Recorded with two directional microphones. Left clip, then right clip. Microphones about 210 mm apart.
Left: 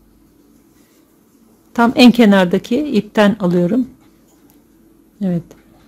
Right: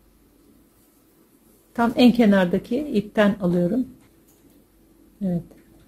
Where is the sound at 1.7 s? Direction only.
30° left (ahead or behind).